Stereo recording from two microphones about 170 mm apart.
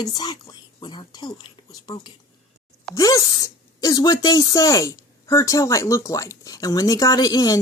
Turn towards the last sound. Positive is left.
turn(degrees=20)  # may be behind; listen again after turning